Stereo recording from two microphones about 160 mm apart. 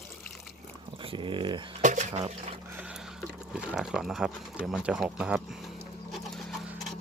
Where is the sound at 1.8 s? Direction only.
45° right (ahead or behind).